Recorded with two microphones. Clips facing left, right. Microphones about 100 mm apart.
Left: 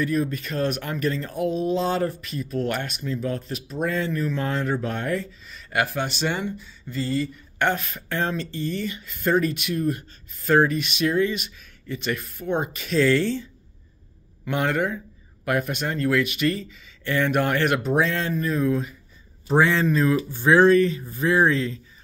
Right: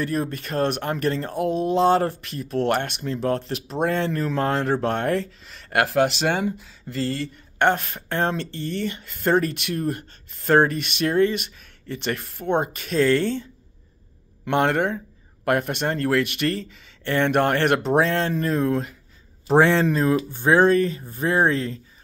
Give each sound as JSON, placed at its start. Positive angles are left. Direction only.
{"t": 0.0, "sound": "speech", "side_deg": -50}
{"t": 7.6, "sound": "speech", "side_deg": -55}
{"t": 19.8, "sound": "speech", "side_deg": -35}